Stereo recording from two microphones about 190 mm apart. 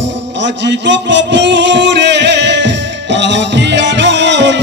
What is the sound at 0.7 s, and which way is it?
Music, 70° right (ahead or behind).